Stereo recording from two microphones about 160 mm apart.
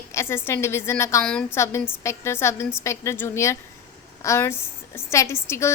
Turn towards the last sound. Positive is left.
turn(degrees=15)  # may be behind; listen again after turning